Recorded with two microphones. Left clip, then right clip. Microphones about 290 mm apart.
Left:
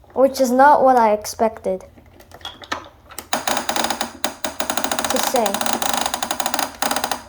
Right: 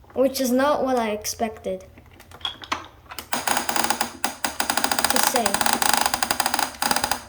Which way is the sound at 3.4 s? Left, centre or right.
Right.